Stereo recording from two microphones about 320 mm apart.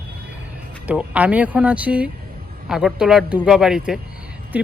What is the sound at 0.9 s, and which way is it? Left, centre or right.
Speech, centre.